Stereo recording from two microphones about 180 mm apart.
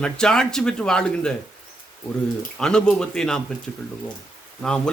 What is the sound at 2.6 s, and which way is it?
Speech, 5° left (ahead or behind).